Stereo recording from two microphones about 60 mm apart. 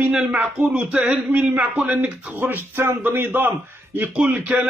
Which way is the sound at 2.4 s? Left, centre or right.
Right.